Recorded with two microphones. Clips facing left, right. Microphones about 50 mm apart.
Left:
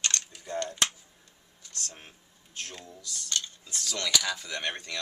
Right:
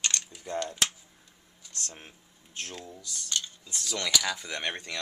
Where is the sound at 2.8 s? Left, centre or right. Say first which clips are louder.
Right 1 dB; centre.